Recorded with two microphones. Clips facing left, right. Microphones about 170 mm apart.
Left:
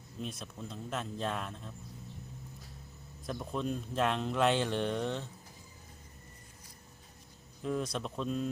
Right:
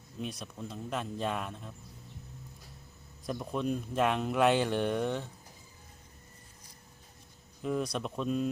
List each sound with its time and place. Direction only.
0.2 s speech: centre (ahead or behind)
3.2 s speech: centre (ahead or behind)
7.6 s speech: 5° right (ahead or behind)